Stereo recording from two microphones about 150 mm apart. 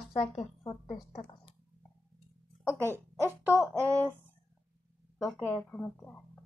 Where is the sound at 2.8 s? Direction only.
15° right (ahead or behind).